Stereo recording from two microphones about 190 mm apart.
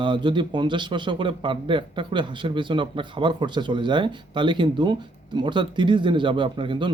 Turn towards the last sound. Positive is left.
turn(degrees=-25)  # may be behind; listen again after turning